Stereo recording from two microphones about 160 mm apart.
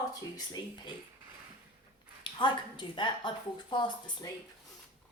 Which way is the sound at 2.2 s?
30° left (ahead or behind).